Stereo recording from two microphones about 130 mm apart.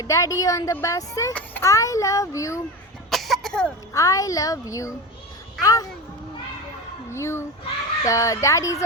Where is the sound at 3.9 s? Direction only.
25° left (ahead or behind).